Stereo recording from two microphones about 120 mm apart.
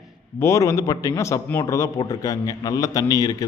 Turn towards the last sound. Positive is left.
turn(degrees=35)  # may be behind; listen again after turning